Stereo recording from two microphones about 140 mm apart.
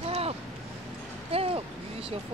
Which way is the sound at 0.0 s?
45° right (ahead or behind).